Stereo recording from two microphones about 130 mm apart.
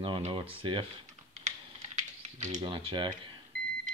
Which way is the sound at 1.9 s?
65° right (ahead or behind).